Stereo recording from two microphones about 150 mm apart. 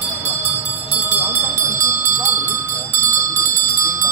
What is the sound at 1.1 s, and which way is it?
Bell, 20° right (ahead or behind).